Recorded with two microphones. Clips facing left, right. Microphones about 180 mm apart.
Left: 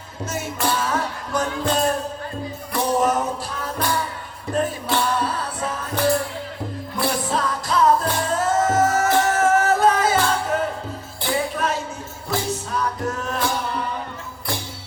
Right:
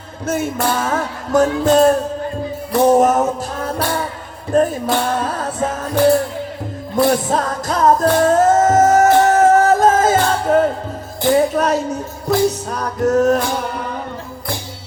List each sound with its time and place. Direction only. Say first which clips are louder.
0.3 s music: right 6 dB; 50° right (ahead or behind)